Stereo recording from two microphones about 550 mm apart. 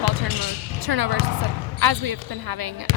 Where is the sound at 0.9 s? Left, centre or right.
Right.